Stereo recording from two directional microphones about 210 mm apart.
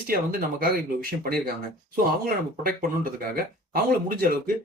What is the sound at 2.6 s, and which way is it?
Speech, 45° right (ahead or behind).